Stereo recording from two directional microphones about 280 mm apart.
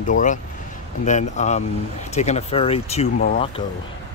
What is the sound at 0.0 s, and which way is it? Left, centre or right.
Speech, left.